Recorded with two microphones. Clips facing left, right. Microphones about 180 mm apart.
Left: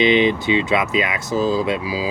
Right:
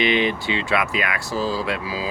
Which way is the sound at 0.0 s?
20° left (ahead or behind).